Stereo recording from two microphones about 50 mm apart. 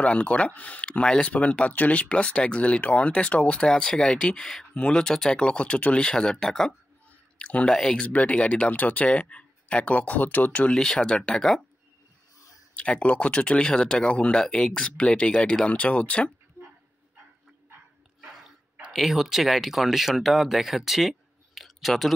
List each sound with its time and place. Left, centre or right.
0.0 s speech: left
1.3 s speech: left; by 6.7 s centre
7.3 s speech: left
7.7 s speech: centre
8.0 s speech: left
10.7 s speech: centre
12.7 s speech: left
16.6 s dog: right
18.9 s speech: centre